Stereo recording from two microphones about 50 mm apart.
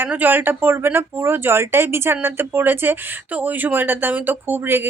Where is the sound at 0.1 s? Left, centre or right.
Right.